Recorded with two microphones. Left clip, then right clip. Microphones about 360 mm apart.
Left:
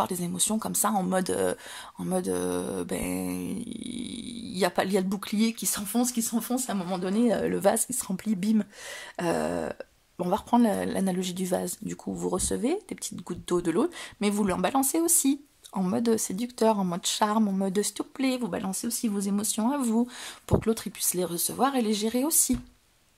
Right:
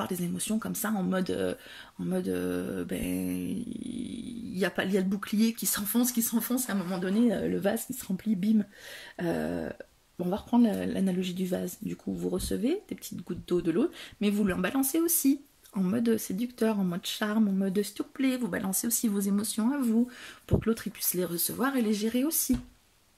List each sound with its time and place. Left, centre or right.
0.0 s speech: centre